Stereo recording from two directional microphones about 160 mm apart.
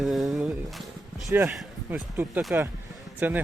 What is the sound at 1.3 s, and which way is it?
Speech, 15° right (ahead or behind).